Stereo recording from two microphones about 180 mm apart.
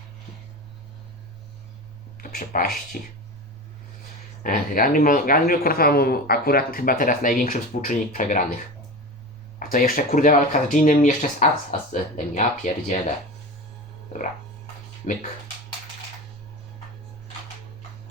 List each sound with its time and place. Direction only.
2.1 s speech: 50° left (ahead or behind)
4.4 s speech: 50° left (ahead or behind)
9.7 s speech: 55° left (ahead or behind)